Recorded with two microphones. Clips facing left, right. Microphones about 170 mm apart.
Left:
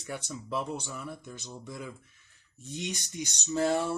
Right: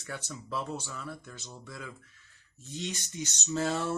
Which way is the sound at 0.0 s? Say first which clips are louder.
Left 3 dB; 15° left (ahead or behind).